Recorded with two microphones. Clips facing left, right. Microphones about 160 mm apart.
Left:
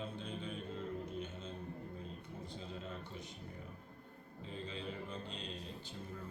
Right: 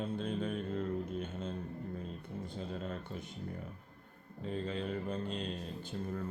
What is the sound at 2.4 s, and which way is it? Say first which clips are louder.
Speech: right 6 dB; 55° right (ahead or behind).